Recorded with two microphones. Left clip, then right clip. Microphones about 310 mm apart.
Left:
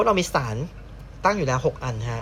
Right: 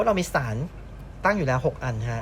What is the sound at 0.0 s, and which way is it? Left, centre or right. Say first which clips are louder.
Speech: left 2 dB; centre.